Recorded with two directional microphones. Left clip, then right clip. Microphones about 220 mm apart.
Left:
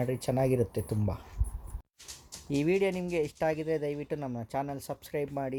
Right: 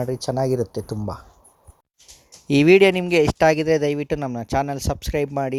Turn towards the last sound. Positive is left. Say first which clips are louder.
# right 11 dB
turn(degrees=-40)  # may be behind; listen again after turning